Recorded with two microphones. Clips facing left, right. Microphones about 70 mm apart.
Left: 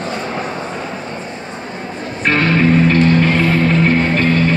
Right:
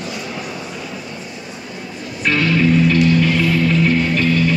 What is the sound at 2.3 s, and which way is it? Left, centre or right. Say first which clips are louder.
Music: left 2 dB; left.